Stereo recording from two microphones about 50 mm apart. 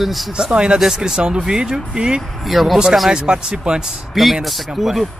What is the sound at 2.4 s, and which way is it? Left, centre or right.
Speech, centre.